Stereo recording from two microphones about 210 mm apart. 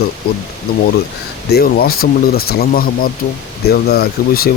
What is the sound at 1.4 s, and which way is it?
Speech, 50° left (ahead or behind).